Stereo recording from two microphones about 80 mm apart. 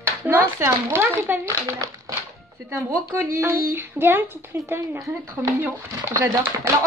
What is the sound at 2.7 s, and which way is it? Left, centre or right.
A woman's voice, right.